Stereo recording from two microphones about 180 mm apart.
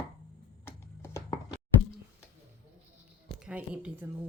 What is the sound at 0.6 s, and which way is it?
Chopping, 15° left (ahead or behind).